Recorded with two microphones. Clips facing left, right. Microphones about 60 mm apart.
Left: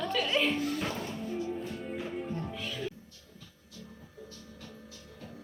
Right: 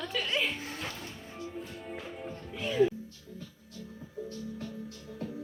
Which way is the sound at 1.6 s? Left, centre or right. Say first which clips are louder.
Left 4 dB; centre.